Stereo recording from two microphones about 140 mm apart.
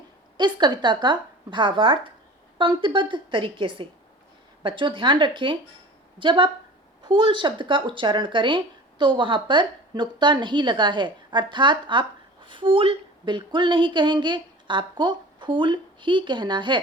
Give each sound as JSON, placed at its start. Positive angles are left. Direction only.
{"t": 0.3, "sound": "speech", "side_deg": -35}